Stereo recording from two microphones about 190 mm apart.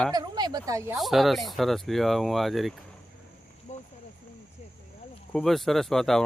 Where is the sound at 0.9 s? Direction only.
Centre (ahead or behind).